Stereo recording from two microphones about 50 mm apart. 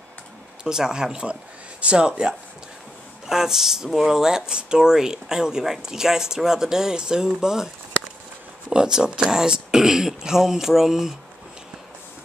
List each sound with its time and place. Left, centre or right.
0.7 s speech: centre